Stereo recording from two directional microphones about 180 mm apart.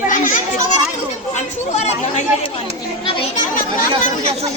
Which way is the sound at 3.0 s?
30° left (ahead or behind).